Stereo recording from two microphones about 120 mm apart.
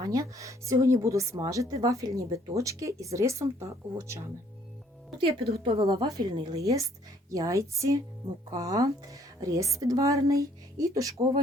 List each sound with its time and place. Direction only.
0.0 s speech: 30° right (ahead or behind)
5.1 s speech: 45° right (ahead or behind)
5.9 s a woman's voice: 35° right (ahead or behind)